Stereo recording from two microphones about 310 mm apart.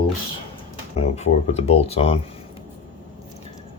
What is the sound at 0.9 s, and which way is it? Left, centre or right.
Speech, left.